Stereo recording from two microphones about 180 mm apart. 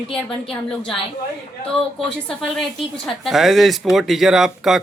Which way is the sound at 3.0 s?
Centre (ahead or behind).